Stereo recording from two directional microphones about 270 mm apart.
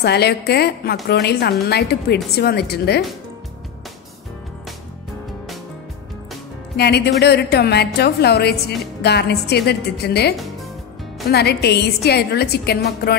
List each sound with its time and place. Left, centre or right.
0.0 s a woman's voice: left
6.8 s a woman's voice: left
10.3 s music: centre
11.2 s a woman's voice: left